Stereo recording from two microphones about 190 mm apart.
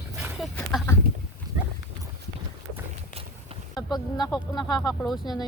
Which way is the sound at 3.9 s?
20° left (ahead or behind).